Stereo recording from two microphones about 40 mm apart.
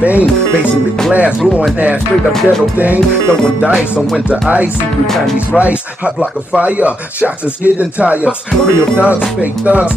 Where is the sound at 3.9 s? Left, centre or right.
Right.